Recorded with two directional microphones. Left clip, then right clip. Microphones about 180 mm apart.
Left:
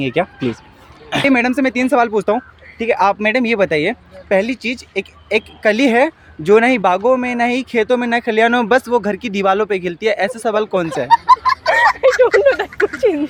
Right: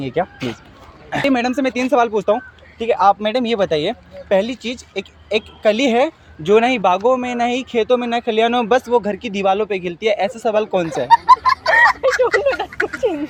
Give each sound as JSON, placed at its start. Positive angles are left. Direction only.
{"t": 0.0, "sound": "speech", "side_deg": 50}
{"t": 1.1, "sound": "speech", "side_deg": 40}
{"t": 11.1, "sound": "fowl", "side_deg": 0}
{"t": 12.3, "sound": "speech", "side_deg": 0}
{"t": 12.6, "sound": "a sound", "side_deg": 0}
{"t": 13.0, "sound": "speech", "side_deg": 40}